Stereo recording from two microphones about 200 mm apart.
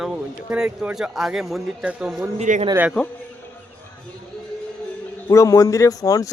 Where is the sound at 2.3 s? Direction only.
35° right (ahead or behind).